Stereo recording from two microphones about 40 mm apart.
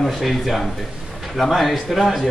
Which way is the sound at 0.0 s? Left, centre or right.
Centre.